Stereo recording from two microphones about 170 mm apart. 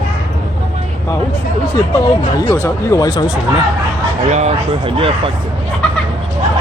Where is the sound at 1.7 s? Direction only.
15° left (ahead or behind).